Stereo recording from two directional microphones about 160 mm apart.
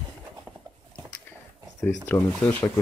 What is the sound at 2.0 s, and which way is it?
Speech, 15° left (ahead or behind).